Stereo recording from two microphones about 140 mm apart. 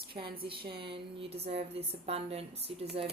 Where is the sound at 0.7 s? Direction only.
35° right (ahead or behind).